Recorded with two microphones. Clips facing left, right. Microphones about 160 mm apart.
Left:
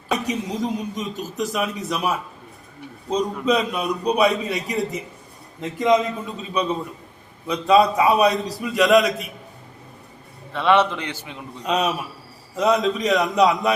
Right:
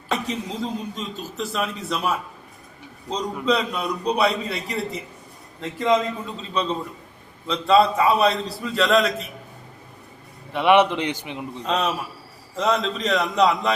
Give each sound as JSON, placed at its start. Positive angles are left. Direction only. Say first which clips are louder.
{"t": 0.3, "sound": "a man's voice", "louder": "left 3 dB", "side_deg": 15}
{"t": 10.5, "sound": "a man's voice", "louder": "right 1 dB", "side_deg": -15}
{"t": 11.6, "sound": "a man's voice", "louder": "left 2 dB", "side_deg": 15}